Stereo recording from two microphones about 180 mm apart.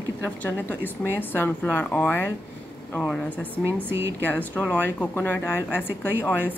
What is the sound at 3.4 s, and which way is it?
Speech, 10° right (ahead or behind).